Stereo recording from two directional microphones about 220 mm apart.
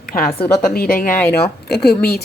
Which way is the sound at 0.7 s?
40° left (ahead or behind).